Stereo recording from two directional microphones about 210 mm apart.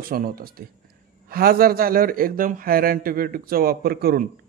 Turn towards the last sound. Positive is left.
turn(degrees=-45)  # may be behind; listen again after turning